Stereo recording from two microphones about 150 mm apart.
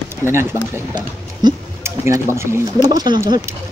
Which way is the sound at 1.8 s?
20° right (ahead or behind).